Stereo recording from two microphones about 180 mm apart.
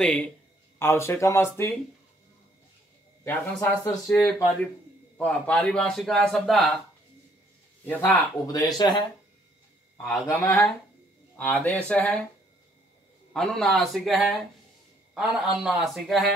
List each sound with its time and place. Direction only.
0.0 s speech: 5° left (ahead or behind)
3.3 s speech: 15° left (ahead or behind)
7.8 s speech: 10° left (ahead or behind)
8.5 s speech: 20° left (ahead or behind)
10.2 s speech: 15° left (ahead or behind)
13.3 s speech: centre (ahead or behind)